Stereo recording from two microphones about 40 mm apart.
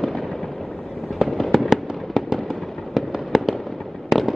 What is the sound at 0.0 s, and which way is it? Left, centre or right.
Fireworks, centre.